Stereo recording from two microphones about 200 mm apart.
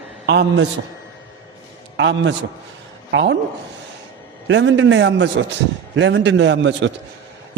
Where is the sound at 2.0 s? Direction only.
65° right (ahead or behind).